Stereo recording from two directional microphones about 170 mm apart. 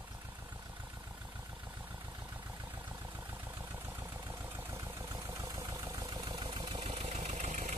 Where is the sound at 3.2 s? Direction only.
10° right (ahead or behind); by 7.8 s 45° right (ahead or behind).